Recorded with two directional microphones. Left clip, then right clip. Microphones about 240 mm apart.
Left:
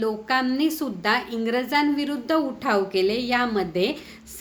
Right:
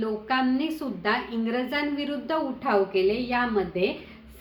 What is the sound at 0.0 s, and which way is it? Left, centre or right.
A woman's voice, left.